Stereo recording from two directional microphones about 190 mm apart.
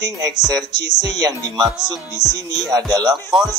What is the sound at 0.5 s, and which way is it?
Music, 20° right (ahead or behind).